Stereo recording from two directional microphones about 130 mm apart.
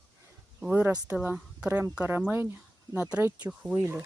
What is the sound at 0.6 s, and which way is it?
Speech, 15° right (ahead or behind).